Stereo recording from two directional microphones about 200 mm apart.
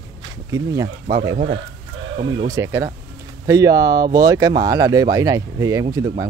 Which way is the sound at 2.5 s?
15° right (ahead or behind).